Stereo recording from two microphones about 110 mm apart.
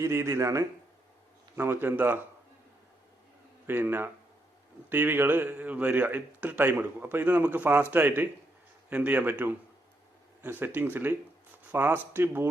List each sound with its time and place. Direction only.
0.0 s speech: 25° right (ahead or behind)
3.7 s a man's voice: 20° right (ahead or behind)